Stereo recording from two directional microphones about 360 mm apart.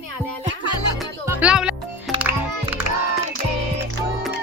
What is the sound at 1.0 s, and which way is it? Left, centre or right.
Music, centre.